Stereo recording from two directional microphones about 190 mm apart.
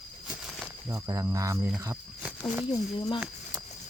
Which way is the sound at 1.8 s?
15° right (ahead or behind).